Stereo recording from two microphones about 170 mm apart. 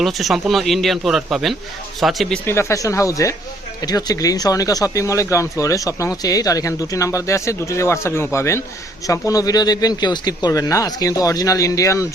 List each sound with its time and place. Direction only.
0.0 s speech: centre (ahead or behind)
2.5 s speech: 15° left (ahead or behind)